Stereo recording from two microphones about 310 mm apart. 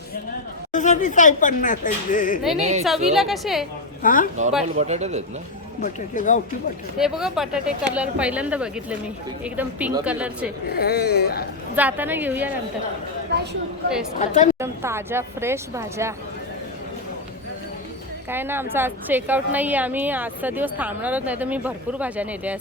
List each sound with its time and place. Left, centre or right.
0.7 s speech: left
2.6 s speech: right
2.8 s a woman's voice: centre
4.0 s speech: left
4.8 s speech: right
5.8 s speech: left
7.0 s a woman's voice: centre
10.8 s speech: left
11.8 s a woman's voice: centre
13.3 s speech: right
14.2 s speech: left
14.6 s speech: centre
18.3 s a woman's voice: centre